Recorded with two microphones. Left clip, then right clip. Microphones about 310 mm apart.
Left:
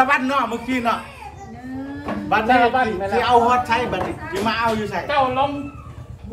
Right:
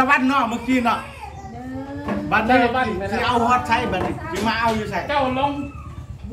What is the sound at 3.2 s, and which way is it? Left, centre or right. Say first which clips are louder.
A man's voice: left 3 dB; centre.